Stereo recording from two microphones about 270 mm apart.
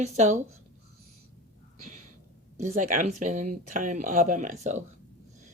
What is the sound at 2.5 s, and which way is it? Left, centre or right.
Speech, right.